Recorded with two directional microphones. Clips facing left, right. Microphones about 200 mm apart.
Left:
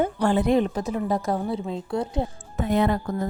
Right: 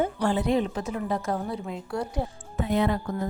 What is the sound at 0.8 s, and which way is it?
A woman's voice, 35° left (ahead or behind).